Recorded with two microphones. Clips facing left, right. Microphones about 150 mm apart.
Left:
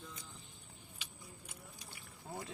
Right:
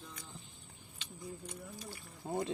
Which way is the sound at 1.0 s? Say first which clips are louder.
Right 12 dB; 5° left (ahead or behind).